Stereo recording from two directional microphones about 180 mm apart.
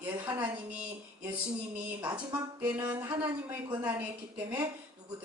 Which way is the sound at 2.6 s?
10° right (ahead or behind).